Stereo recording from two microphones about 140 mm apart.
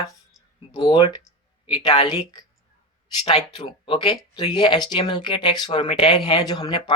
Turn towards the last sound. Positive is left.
turn(degrees=30)  # may be behind; listen again after turning